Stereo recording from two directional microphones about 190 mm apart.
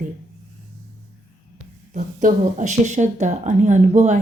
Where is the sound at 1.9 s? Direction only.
40° right (ahead or behind).